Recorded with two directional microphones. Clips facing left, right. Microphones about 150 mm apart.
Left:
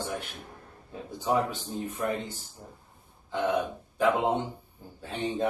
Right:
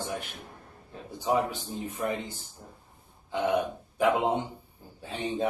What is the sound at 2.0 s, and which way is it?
Speech, 10° right (ahead or behind).